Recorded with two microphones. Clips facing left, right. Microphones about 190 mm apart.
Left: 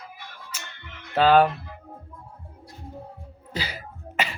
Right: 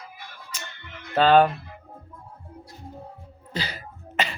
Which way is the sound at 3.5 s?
10° left (ahead or behind).